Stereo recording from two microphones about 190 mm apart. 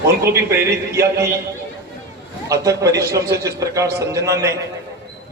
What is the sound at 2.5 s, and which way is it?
A man's voice, 15° right (ahead or behind).